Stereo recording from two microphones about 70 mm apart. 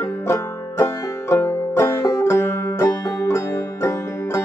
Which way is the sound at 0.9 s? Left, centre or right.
Left.